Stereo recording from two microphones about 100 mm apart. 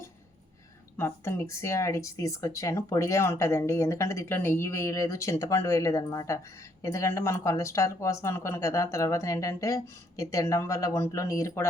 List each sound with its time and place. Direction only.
0.9 s speech: 25° left (ahead or behind)